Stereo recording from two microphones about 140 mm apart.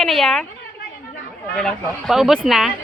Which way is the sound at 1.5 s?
5° left (ahead or behind).